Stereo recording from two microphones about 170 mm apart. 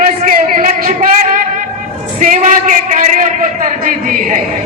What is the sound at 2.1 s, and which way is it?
A man's voice, 50° right (ahead or behind).